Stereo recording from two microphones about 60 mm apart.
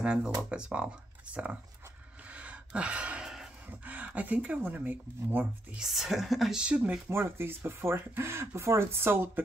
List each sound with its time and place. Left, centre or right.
0.0 s speech: centre
2.3 s gasp: right
3.8 s speech: right
5.8 s a woman's voice: centre
6.5 s speech: centre
7.1 s speech: right